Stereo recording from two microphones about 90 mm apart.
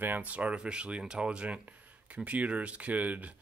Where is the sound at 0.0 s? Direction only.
20° right (ahead or behind).